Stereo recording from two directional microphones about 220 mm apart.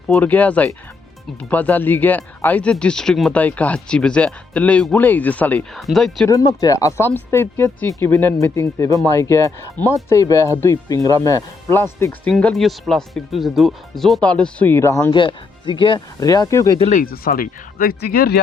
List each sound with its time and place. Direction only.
0.1 s speech: 5° left (ahead or behind)
6.2 s speech: 15° left (ahead or behind)
16.7 s speech: 25° left (ahead or behind)
17.0 s speech: 40° left (ahead or behind)